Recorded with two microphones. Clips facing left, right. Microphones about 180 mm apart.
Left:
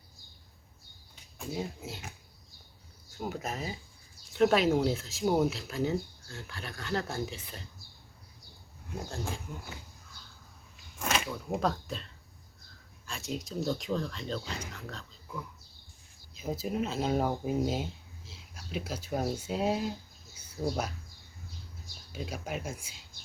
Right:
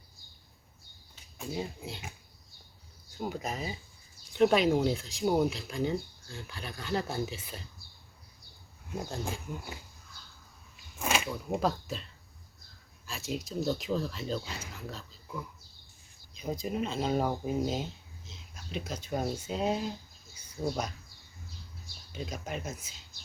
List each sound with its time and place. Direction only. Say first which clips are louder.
1.4 s speech: even; centre (ahead or behind)
3.2 s speech: right 1 dB; centre (ahead or behind)
9.0 s speech: even; 15° right (ahead or behind)
11.0 s speech: right 1 dB; 5° right (ahead or behind)
13.1 s speech: right 1 dB; centre (ahead or behind)
20.3 s bird: left 1 dB; 10° left (ahead or behind)
20.6 s speech: left 1 dB; 5° left (ahead or behind)
22.1 s speech: left 1 dB; 10° left (ahead or behind)